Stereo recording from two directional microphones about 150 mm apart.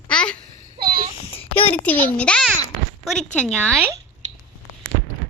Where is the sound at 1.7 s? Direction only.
10° left (ahead or behind).